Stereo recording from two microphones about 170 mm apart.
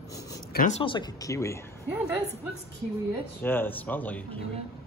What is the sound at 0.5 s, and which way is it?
Speech, 45° left (ahead or behind).